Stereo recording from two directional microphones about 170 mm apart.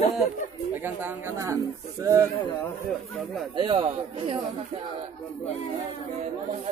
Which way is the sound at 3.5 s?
30° right (ahead or behind).